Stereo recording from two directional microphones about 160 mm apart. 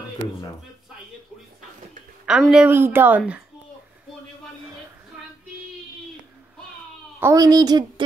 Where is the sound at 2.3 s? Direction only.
5° right (ahead or behind).